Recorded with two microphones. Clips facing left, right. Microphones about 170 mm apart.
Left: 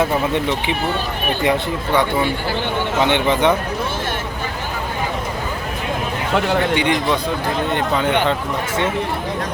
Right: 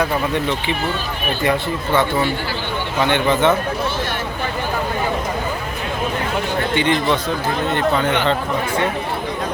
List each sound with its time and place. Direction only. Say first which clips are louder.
0.0 s speech: left 1 dB; 20° left (ahead or behind)
6.7 s speech: right 1 dB; 15° left (ahead or behind)